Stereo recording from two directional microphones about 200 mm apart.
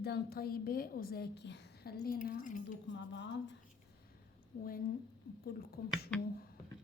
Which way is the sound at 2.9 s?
65° left (ahead or behind).